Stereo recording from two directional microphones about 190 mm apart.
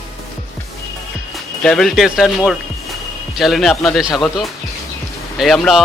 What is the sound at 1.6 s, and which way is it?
Speech, centre (ahead or behind).